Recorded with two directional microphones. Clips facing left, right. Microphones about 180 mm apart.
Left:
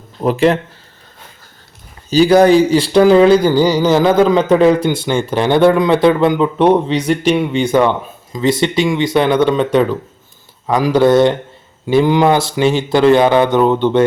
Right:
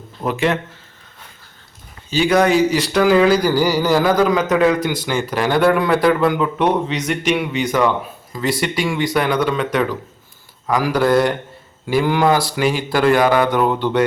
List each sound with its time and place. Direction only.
0.2 s speech: 35° left (ahead or behind)
2.0 s speech: 35° left (ahead or behind)